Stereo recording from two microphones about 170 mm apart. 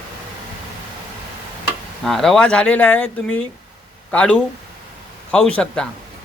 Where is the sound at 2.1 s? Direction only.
Centre (ahead or behind).